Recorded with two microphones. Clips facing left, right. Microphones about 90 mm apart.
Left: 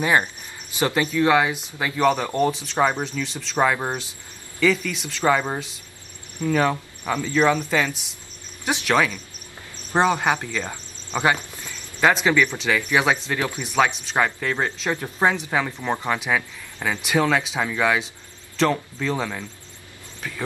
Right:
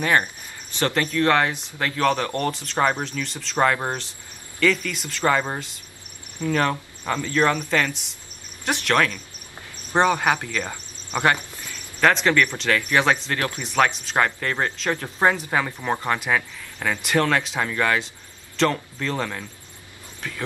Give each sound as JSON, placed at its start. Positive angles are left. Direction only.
{"t": 0.0, "sound": "speech", "side_deg": 15}
{"t": 10.6, "sound": "cricket", "side_deg": -15}
{"t": 11.3, "sound": "a sound", "side_deg": 20}
{"t": 12.0, "sound": "speech", "side_deg": 5}